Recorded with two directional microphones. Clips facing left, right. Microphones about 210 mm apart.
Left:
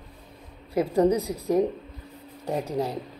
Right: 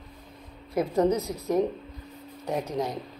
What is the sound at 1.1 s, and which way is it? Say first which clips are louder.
Speech: left 2 dB; 15° left (ahead or behind).